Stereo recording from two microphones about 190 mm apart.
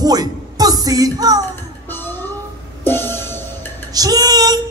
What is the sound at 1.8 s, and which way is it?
Music, 10° left (ahead or behind).